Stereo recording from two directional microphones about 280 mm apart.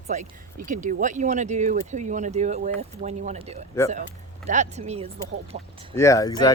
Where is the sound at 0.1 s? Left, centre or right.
Right.